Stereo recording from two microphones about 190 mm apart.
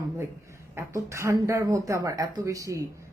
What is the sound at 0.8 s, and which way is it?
Speech, 15° right (ahead or behind).